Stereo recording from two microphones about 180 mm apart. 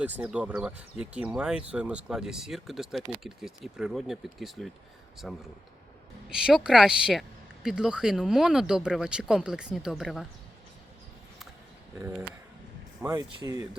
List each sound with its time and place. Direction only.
0.0 s speech: 10° right (ahead or behind)
13.0 s speech: 20° right (ahead or behind)